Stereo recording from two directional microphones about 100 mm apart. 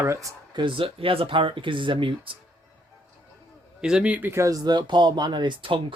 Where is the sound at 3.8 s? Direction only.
10° right (ahead or behind).